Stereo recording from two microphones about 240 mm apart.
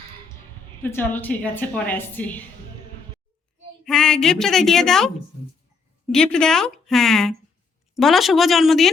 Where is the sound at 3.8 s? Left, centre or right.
Centre.